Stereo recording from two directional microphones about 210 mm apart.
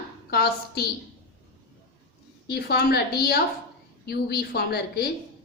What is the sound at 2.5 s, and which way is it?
A woman's voice, 50° left (ahead or behind).